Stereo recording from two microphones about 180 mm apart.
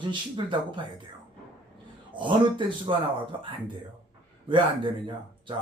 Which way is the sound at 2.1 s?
25° right (ahead or behind).